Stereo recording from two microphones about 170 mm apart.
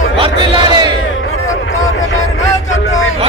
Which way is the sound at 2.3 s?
45° left (ahead or behind).